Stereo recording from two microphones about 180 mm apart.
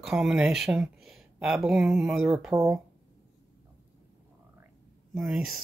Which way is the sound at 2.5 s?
20° right (ahead or behind).